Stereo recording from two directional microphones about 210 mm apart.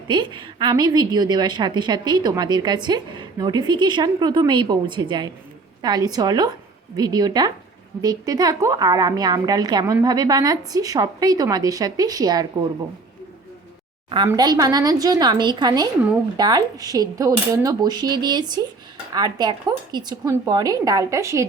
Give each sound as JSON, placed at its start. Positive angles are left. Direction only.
{"t": 0.1, "sound": "a woman's voice", "side_deg": -20}
{"t": 14.3, "sound": "a woman's voice", "side_deg": -20}